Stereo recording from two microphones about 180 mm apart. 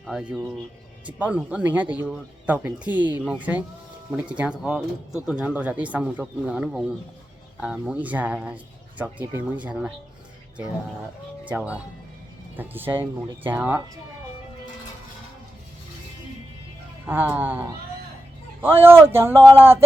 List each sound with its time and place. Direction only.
0.0 s speech: 5° right (ahead or behind)
11.4 s speech: 10° right (ahead or behind)
17.1 s speech: 10° right (ahead or behind)